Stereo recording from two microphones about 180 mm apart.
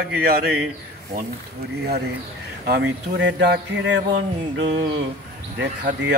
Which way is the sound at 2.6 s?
65° right (ahead or behind).